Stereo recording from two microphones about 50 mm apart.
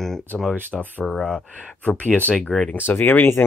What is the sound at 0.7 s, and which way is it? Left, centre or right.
Speech, centre.